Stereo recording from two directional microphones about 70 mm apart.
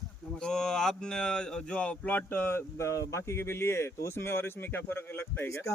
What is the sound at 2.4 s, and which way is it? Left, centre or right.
Speech, left.